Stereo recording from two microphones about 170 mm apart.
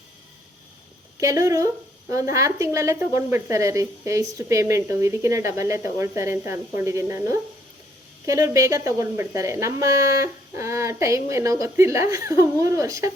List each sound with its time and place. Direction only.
1.2 s speech: 20° right (ahead or behind)